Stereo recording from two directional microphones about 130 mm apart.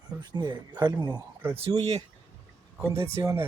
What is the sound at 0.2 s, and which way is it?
Speech, 35° right (ahead or behind).